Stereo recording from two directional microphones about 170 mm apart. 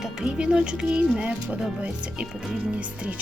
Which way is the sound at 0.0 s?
5° right (ahead or behind).